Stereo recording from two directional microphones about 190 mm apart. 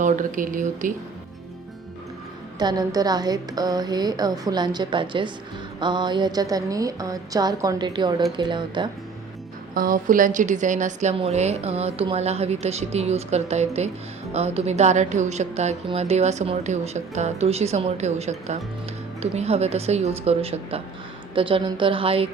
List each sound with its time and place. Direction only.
0.0 s speech: 40° right (ahead or behind)
2.6 s a woman's voice: 20° right (ahead or behind)
9.7 s a woman's voice: 45° right (ahead or behind); by 22.3 s 30° right (ahead or behind)